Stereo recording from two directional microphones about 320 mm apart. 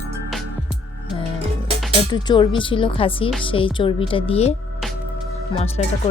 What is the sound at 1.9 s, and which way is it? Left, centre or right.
Speech, centre.